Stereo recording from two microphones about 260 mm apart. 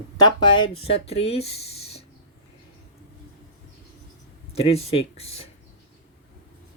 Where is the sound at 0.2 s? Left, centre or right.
Centre.